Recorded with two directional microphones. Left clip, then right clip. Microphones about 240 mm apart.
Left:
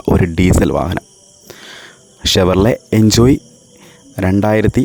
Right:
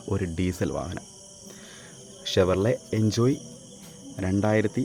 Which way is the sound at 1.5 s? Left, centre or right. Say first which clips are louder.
Left 15 dB; left.